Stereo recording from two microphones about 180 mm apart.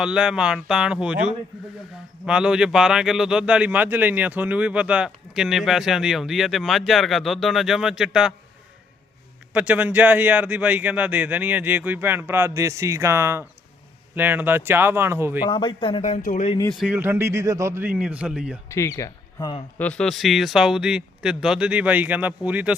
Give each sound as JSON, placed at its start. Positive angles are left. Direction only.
{"t": 0.0, "sound": "a man's voice", "side_deg": -5}
{"t": 9.5, "sound": "speech", "side_deg": -5}
{"t": 15.4, "sound": "speech", "side_deg": 25}
{"t": 16.8, "sound": "speech", "side_deg": -10}
{"t": 18.7, "sound": "speech", "side_deg": 15}
{"t": 19.8, "sound": "a man's voice", "side_deg": 5}